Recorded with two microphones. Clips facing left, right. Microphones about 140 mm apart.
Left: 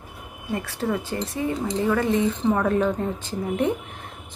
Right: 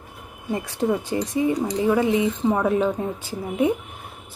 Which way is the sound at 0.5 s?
15° right (ahead or behind).